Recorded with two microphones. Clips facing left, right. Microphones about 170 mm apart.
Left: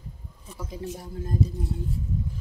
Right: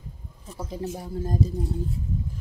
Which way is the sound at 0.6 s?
35° right (ahead or behind).